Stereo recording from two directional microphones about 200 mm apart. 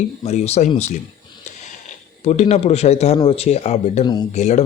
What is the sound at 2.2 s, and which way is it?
Speech, 35° left (ahead or behind).